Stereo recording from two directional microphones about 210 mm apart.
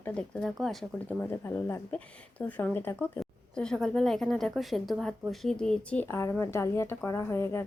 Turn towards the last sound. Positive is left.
turn(degrees=10)  # may be behind; listen again after turning